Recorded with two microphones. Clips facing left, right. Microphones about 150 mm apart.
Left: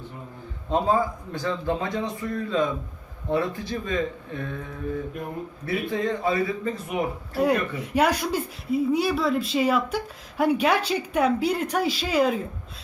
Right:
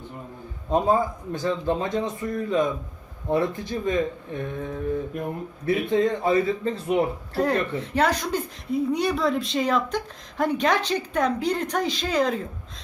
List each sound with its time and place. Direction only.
0.7 s speech: 20° right (ahead or behind)
7.3 s speech: 10° left (ahead or behind)